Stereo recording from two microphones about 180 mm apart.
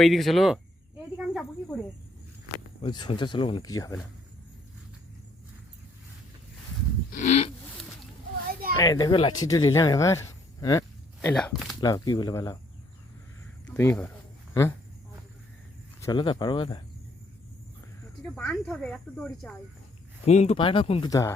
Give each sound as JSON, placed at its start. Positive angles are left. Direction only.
{"t": 0.0, "sound": "speech", "side_deg": 0}
{"t": 2.8, "sound": "speech", "side_deg": 25}
{"t": 7.1, "sound": "livestock", "side_deg": 40}
{"t": 8.8, "sound": "speech", "side_deg": 25}
{"t": 11.3, "sound": "speech", "side_deg": 0}
{"t": 11.8, "sound": "speech", "side_deg": 20}
{"t": 13.7, "sound": "speech", "side_deg": 10}
{"t": 16.0, "sound": "a sound", "side_deg": 15}
{"t": 16.2, "sound": "speech", "side_deg": 25}
{"t": 18.2, "sound": "speech", "side_deg": 5}
{"t": 20.2, "sound": "speech", "side_deg": 40}
{"t": 21.1, "sound": "speech", "side_deg": 20}